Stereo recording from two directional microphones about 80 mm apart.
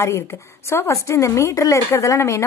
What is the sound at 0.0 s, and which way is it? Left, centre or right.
Speech, left.